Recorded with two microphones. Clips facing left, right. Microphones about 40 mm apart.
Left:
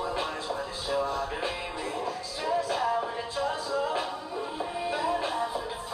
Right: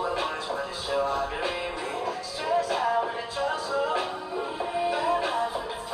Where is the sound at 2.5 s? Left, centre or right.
Right.